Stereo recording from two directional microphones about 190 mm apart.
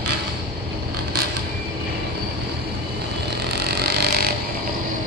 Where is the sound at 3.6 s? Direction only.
55° right (ahead or behind).